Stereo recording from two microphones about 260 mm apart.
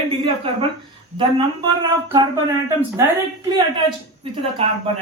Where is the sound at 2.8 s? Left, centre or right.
Centre.